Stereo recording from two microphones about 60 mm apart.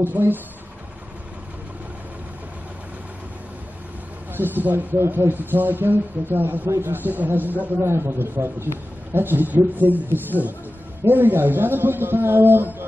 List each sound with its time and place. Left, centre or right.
0.0 s a man's voice: right
4.4 s a man's voice: right
7.8 s a man's voice: right